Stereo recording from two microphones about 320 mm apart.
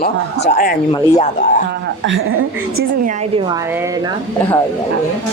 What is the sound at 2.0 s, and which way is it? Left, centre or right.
Speech, right.